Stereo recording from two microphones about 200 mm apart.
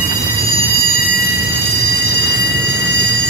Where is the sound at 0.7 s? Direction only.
50° left (ahead or behind).